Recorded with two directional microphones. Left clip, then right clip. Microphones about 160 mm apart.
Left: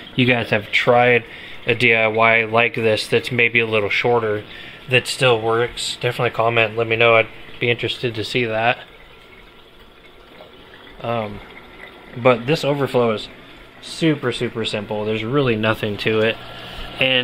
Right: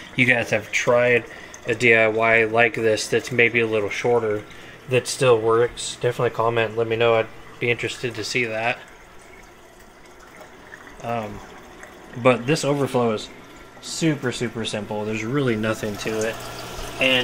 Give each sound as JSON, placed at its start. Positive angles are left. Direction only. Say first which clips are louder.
{"t": 0.1, "sound": "speech", "louder": "left 1 dB", "side_deg": 25}
{"t": 7.7, "sound": "speech", "louder": "left 3 dB", "side_deg": 25}
{"t": 11.0, "sound": "speech", "louder": "left 4 dB", "side_deg": 25}
{"t": 12.2, "sound": "speech", "louder": "left 3 dB", "side_deg": 10}